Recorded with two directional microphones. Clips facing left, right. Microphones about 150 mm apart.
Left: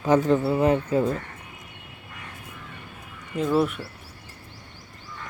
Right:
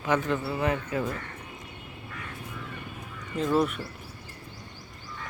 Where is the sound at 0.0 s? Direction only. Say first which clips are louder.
Left 7 dB; 35° left (ahead or behind).